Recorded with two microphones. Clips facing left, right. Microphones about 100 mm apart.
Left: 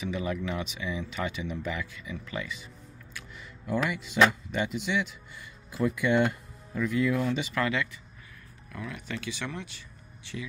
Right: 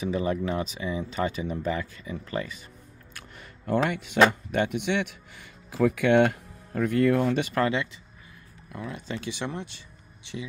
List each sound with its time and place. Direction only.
0.0 s speech: 35° right (ahead or behind)
3.1 s a sound: 55° right (ahead or behind)
3.9 s speech: 60° right (ahead or behind)
7.6 s speech: 30° right (ahead or behind)